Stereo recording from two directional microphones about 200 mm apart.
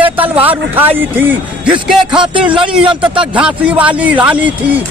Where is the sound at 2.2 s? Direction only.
25° right (ahead or behind).